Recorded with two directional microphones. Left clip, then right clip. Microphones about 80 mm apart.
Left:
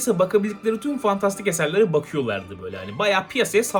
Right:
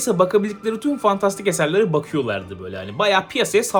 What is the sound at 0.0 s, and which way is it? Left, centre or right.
Speech, right.